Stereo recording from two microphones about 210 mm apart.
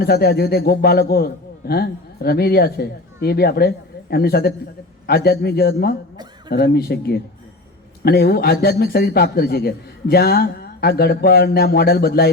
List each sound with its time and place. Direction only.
0.0 s a man's voice: 50° left (ahead or behind)